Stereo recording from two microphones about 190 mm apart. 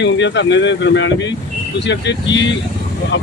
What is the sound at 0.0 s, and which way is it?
Speech, 70° left (ahead or behind).